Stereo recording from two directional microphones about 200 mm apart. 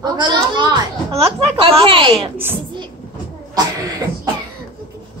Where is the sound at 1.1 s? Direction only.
30° right (ahead or behind).